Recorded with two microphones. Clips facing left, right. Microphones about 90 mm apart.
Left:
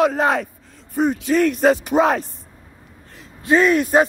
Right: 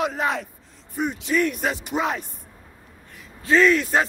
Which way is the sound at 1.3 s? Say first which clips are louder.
Left 4 dB; 85° left.